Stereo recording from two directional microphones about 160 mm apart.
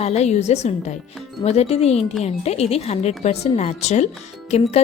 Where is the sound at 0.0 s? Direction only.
45° left (ahead or behind).